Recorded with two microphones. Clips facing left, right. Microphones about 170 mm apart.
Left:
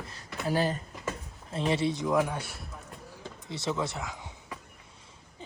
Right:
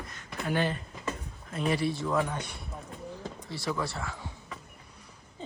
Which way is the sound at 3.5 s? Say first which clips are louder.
Left 2 dB; 20° left (ahead or behind).